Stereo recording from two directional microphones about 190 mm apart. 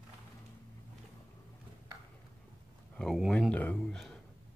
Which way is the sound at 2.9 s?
Centre (ahead or behind).